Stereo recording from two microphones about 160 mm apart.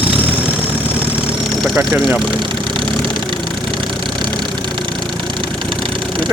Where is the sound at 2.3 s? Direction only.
30° right (ahead or behind).